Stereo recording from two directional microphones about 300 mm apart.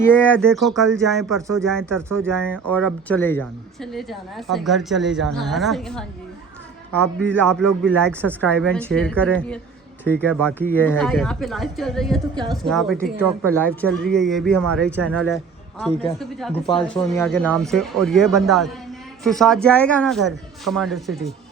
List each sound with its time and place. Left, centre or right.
0.0 s speech: centre
1.4 s speech: centre
2.1 s speech: centre
12.3 s speech: centre
12.6 s speech: centre
16.7 s speech: centre